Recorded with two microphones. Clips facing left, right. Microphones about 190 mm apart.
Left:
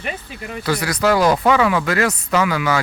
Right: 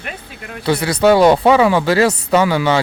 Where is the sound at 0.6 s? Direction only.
25° right (ahead or behind).